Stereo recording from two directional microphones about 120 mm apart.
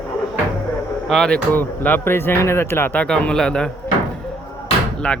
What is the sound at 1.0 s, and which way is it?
Speech, 5° left (ahead or behind).